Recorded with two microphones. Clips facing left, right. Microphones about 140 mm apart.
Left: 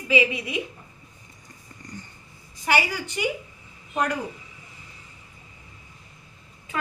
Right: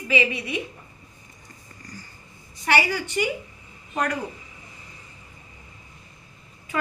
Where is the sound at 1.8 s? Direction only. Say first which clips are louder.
Left 3 dB; 25° left (ahead or behind).